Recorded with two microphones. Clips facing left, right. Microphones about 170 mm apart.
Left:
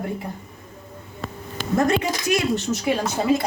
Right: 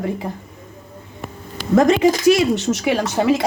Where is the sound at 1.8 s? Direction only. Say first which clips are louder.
Right 7 dB; 90° right.